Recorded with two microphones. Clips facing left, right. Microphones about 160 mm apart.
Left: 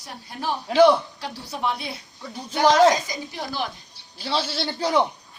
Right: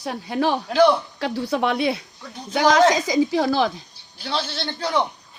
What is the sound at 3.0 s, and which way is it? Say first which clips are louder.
Speech: right 13 dB; 90° right.